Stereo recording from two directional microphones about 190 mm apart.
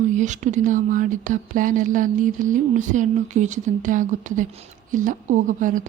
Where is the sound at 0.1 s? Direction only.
40° right (ahead or behind).